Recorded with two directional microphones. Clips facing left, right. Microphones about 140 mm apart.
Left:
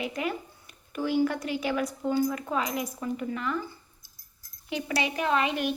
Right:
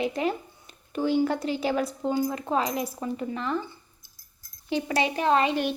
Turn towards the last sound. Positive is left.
turn(degrees=-30)  # may be behind; listen again after turning